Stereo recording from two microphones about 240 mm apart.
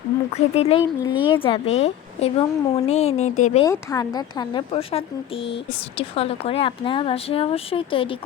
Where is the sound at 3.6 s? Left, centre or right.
Centre.